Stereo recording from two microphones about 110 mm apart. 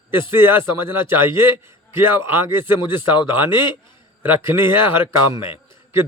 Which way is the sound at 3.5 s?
45° left (ahead or behind).